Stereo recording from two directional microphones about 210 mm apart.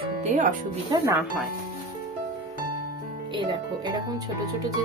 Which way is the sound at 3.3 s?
20° right (ahead or behind).